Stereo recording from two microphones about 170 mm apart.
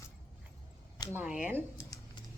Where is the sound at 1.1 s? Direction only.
5° right (ahead or behind).